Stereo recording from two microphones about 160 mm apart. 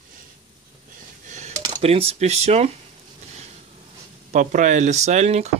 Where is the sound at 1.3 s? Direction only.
45° right (ahead or behind).